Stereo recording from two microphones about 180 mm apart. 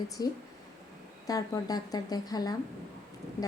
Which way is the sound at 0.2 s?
20° left (ahead or behind).